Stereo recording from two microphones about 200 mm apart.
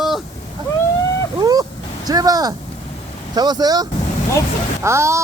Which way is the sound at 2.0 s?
20° right (ahead or behind).